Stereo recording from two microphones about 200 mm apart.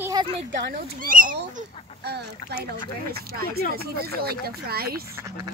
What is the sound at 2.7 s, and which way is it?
Speech, 50° right (ahead or behind).